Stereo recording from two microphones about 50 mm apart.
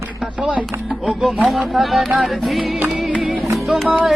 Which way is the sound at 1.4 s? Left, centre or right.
Centre.